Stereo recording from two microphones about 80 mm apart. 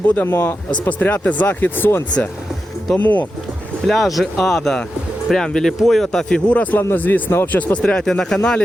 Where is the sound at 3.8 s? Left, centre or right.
Centre; by 7.5 s left.